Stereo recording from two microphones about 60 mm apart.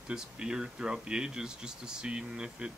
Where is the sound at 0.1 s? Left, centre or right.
Centre.